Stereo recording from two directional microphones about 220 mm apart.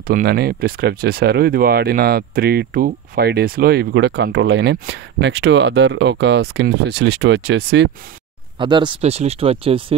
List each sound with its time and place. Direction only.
0.0 s speech: 40° right (ahead or behind)
8.5 s speech: 20° right (ahead or behind)